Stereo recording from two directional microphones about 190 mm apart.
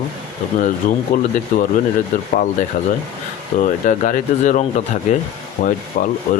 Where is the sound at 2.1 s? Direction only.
40° left (ahead or behind).